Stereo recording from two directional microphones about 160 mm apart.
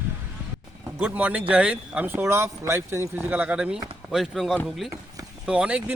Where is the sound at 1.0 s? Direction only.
10° right (ahead or behind).